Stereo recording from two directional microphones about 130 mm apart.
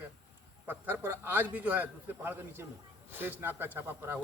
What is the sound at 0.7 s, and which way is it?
A man's voice, 15° right (ahead or behind).